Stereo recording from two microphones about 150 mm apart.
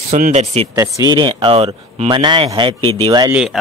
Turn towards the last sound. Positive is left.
turn(degrees=-35)  # may be behind; listen again after turning